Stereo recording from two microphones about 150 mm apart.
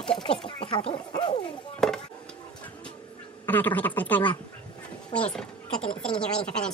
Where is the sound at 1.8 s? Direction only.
5° left (ahead or behind).